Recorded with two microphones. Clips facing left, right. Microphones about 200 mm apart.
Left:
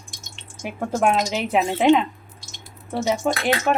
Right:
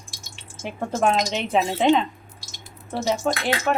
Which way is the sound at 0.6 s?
5° left (ahead or behind).